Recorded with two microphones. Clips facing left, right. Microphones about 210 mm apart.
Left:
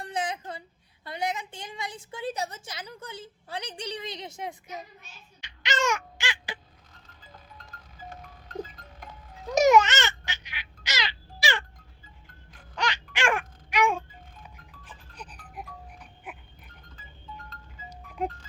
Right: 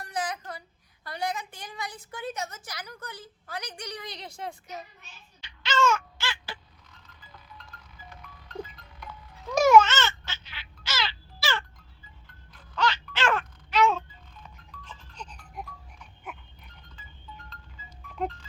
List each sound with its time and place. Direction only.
0.0 s a sound: 25° left (ahead or behind)
1.0 s a woman's voice: 20° left (ahead or behind)
5.4 s baby cry: 15° left (ahead or behind)
7.3 s livestock: 45° left (ahead or behind)
9.5 s babbling: 15° left (ahead or behind)
12.7 s babbling: 15° left (ahead or behind)